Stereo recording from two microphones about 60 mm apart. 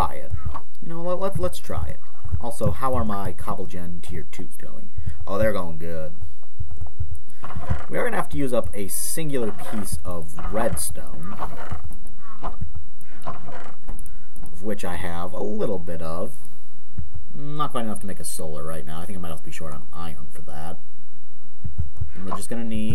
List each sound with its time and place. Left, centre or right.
0.0 s a sound: centre
2.4 s speech: centre
7.4 s speech: centre
13.1 s a sound: centre
14.5 s speech: centre
17.4 s speech: centre
22.1 s speech: centre